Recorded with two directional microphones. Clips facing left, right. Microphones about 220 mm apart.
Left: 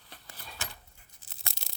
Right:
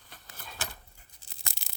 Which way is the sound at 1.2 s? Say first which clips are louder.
Right 1 dB; centre (ahead or behind).